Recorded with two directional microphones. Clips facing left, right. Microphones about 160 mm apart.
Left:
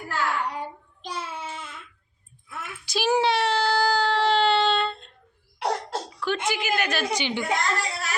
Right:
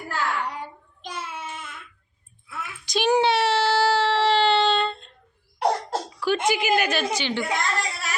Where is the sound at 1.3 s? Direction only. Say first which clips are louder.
Even; 30° left (ahead or behind).